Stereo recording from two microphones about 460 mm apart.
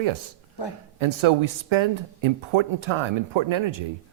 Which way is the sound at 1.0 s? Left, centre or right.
Right.